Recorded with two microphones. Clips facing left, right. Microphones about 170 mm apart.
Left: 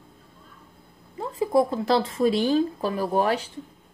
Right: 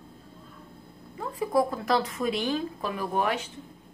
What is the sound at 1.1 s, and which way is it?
Speech, 25° left (ahead or behind).